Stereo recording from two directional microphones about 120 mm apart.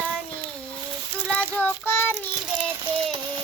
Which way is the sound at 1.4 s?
15° left (ahead or behind).